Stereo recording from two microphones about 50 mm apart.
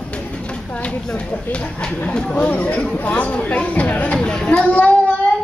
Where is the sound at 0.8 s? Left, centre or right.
Left.